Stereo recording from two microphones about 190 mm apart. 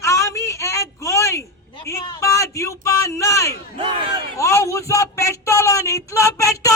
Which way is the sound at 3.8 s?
25° right (ahead or behind).